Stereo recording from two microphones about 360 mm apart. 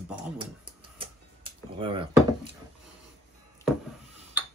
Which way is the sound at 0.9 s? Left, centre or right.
Centre.